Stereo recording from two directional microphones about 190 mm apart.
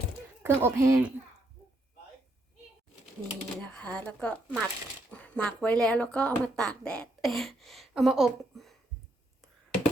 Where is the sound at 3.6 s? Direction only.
5° left (ahead or behind).